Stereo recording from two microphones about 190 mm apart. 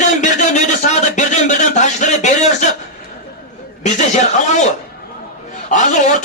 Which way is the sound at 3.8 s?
40° left (ahead or behind).